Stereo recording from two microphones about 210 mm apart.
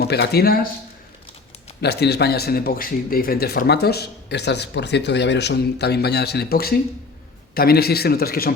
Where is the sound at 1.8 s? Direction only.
50° left (ahead or behind).